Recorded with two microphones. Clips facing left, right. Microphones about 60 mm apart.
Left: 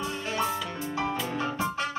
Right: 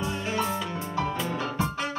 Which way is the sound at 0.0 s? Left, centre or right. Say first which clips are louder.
Right 1 dB; centre.